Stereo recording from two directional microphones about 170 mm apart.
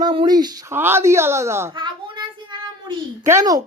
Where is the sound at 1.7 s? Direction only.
30° right (ahead or behind).